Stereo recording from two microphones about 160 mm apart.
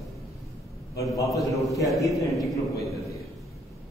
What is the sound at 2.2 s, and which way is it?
Speech, 20° left (ahead or behind).